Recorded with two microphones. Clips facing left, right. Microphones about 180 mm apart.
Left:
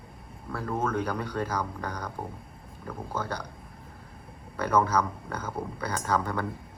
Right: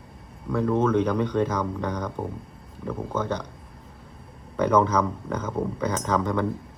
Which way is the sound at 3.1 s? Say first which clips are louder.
Right 5 dB; 10° left (ahead or behind).